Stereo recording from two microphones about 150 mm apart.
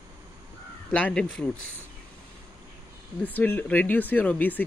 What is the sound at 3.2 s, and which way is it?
Speech, 10° left (ahead or behind).